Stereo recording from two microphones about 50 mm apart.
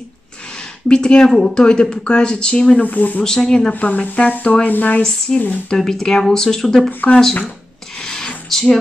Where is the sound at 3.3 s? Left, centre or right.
Centre.